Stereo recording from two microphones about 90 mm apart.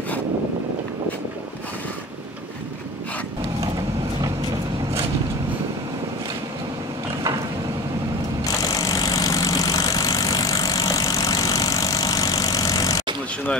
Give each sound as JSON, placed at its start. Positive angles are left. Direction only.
{"t": 8.6, "sound": "vehicle", "side_deg": 40}